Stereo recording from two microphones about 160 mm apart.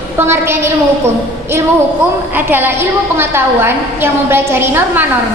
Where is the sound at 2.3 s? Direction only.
10° right (ahead or behind).